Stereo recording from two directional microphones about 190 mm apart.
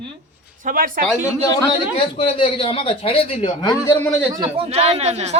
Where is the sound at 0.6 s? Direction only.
45° right (ahead or behind).